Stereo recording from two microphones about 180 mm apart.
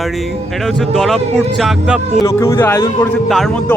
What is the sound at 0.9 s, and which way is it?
Speech, centre (ahead or behind).